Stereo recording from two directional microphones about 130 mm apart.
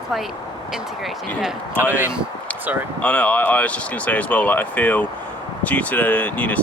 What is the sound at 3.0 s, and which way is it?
Speech, 10° left (ahead or behind).